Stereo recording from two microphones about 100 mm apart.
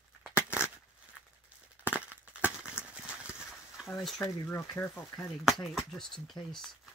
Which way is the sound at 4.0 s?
Centre (ahead or behind).